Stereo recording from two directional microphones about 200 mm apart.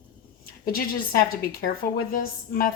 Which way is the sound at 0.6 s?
45° left (ahead or behind).